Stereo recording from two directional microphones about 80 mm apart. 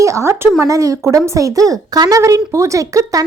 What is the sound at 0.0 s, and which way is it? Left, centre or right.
A woman's voice, right.